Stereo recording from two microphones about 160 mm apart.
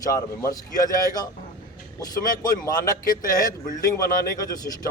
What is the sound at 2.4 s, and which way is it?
Speech, 25° left (ahead or behind).